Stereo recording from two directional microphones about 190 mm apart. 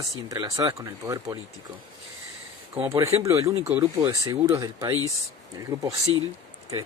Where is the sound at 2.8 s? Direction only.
15° right (ahead or behind).